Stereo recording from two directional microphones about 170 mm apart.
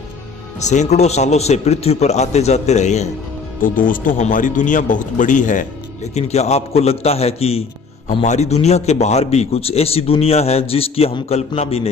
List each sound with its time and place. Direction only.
0.6 s a man's voice: 45° left (ahead or behind)
3.6 s a man's voice: 55° left (ahead or behind); by 11.9 s 35° left (ahead or behind)